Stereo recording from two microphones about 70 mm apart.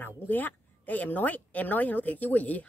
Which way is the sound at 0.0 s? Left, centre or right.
Left.